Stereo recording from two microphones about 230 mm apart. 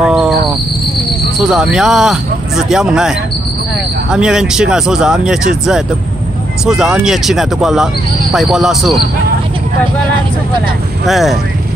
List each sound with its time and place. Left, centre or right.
0.0 s music: centre
1.4 s speech: centre
4.1 s speech: centre
11.1 s speech: centre